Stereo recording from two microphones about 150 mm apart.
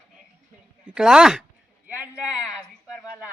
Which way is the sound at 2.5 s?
Centre (ahead or behind).